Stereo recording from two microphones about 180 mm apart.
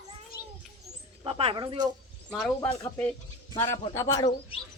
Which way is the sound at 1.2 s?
30° right (ahead or behind).